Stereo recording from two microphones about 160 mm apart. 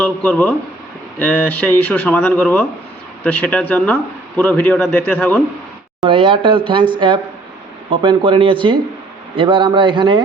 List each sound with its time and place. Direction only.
0.0 s speech: 10° left (ahead or behind)
6.1 s speech: 35° right (ahead or behind)